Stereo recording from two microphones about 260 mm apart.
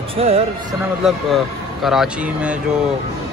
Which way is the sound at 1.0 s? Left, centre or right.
Centre.